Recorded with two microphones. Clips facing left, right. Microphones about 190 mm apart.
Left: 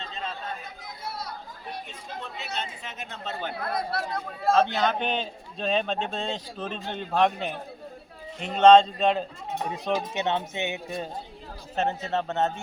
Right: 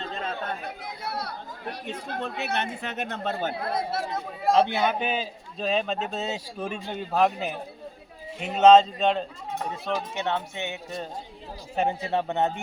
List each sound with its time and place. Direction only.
0.0 s chatter: 55° right (ahead or behind)
3.2 s speech: 45° right (ahead or behind)
3.6 s a man's voice: 25° right (ahead or behind); by 9.2 s centre (ahead or behind)
9.6 s speech: 15° left (ahead or behind)
11.8 s a man's voice: 10° right (ahead or behind)